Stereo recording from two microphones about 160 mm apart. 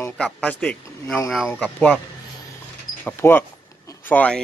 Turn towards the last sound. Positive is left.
turn(degrees=10)  # may be behind; listen again after turning